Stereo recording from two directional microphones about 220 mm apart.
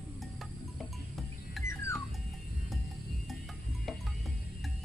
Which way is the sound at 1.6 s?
10° left (ahead or behind).